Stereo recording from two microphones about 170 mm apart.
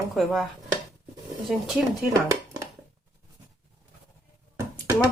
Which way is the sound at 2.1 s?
20° right (ahead or behind).